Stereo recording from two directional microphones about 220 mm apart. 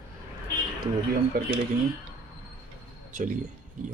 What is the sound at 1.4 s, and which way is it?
Speech, 40° right (ahead or behind).